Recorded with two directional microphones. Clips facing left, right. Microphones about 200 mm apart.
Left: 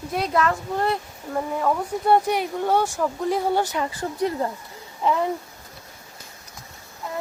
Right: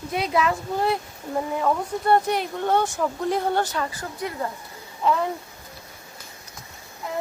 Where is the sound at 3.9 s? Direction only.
30° left (ahead or behind).